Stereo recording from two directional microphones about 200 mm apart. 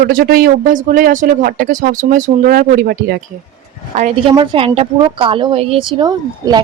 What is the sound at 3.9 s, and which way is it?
A woman's voice, 35° right (ahead or behind).